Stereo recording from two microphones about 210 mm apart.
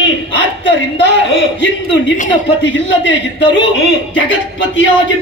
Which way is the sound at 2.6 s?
60° left (ahead or behind).